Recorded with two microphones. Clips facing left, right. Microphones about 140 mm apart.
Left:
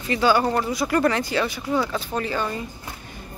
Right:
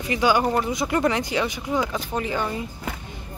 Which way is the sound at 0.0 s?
15° right (ahead or behind).